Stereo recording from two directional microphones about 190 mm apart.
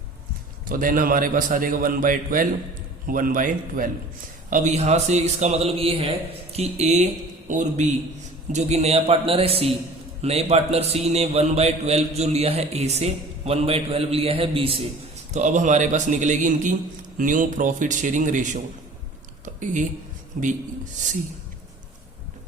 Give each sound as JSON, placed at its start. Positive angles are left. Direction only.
{"t": 0.7, "sound": "a man's voice", "side_deg": -45}
{"t": 15.3, "sound": "a man's voice", "side_deg": -40}
{"t": 20.4, "sound": "a man's voice", "side_deg": -45}